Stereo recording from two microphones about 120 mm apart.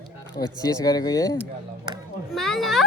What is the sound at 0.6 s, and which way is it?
Speech, 30° left (ahead or behind).